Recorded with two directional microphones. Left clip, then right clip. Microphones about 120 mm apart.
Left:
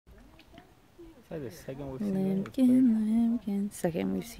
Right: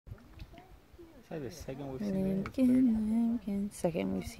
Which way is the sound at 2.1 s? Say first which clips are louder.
Left 3 dB; 35° left (ahead or behind).